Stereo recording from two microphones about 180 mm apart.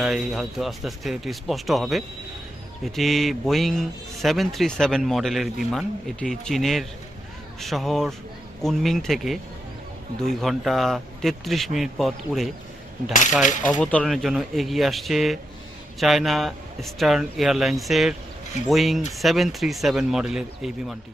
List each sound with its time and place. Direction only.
0.0 s speech: centre (ahead or behind)
13.4 s coin: 45° left (ahead or behind)
13.7 s speech: 5° left (ahead or behind)